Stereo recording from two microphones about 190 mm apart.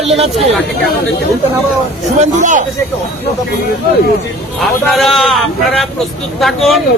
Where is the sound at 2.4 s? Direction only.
40° right (ahead or behind).